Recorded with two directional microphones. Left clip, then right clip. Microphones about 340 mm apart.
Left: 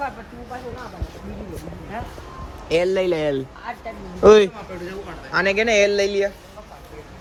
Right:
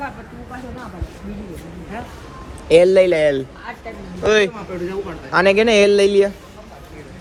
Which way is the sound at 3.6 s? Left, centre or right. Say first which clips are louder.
Even; left.